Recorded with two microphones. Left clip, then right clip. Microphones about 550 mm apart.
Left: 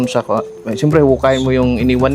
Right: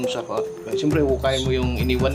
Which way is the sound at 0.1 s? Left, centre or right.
Left.